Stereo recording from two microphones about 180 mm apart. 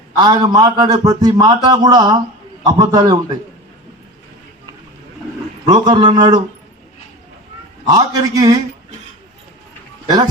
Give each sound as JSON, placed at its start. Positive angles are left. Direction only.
{"t": 0.2, "sound": "a man's voice", "side_deg": -20}
{"t": 5.6, "sound": "a man's voice", "side_deg": -25}
{"t": 7.9, "sound": "a man's voice", "side_deg": -20}